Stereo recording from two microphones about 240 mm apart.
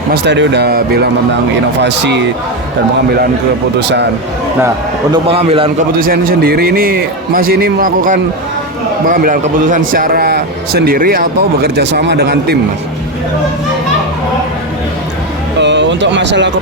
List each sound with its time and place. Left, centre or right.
0.1 s speech: right
3.8 s speech: right
5.1 s a man's voice: right
6.0 s a man's voice: right
15.6 s a sound: right